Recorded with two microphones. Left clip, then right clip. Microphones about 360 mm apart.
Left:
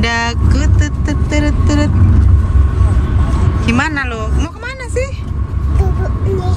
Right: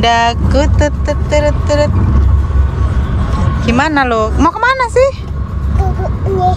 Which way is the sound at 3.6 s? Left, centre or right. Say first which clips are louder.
Right 3 dB; centre.